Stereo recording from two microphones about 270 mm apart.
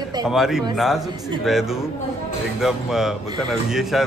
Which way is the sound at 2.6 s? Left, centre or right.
Centre.